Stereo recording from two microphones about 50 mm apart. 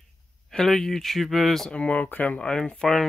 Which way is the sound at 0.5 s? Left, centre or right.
Centre.